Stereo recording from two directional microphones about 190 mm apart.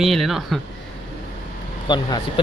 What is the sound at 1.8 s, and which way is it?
Speech, 25° left (ahead or behind).